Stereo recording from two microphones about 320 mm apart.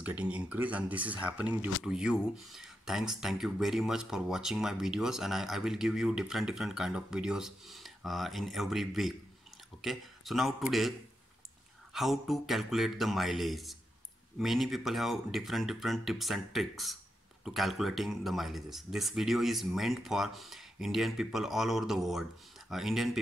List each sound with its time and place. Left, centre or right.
0.0 s speech: centre